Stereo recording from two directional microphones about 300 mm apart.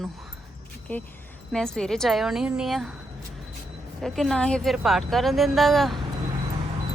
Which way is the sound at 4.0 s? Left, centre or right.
Centre.